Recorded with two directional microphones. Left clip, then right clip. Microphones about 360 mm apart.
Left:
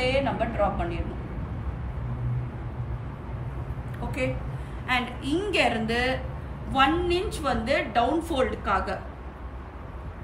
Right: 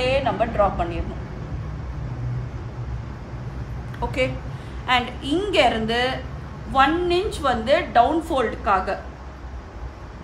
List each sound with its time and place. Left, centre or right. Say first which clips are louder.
0.0 s a woman's voice: right 4 dB; centre
4.0 s a sound: right 9 dB; centre
4.8 s a woman's voice: right 6 dB; centre